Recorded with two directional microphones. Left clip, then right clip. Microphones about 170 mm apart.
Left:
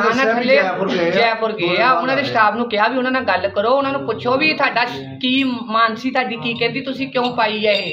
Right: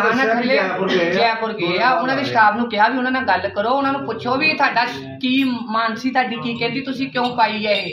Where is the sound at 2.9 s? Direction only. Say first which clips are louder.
Left 2 dB; 30° left (ahead or behind).